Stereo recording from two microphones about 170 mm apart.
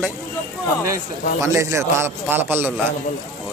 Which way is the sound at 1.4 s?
15° right (ahead or behind).